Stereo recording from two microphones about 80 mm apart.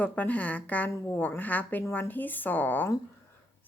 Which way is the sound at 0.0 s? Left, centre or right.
Centre.